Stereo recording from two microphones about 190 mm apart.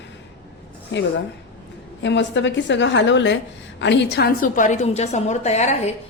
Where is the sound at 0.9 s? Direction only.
70° left (ahead or behind).